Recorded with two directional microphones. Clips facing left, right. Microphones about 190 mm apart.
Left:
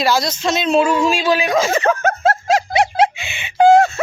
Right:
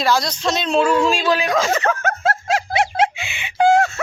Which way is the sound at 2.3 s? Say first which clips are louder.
Left 4 dB; 40° left (ahead or behind).